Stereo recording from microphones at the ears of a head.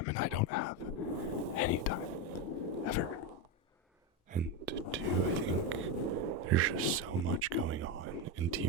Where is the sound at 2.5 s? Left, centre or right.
Left.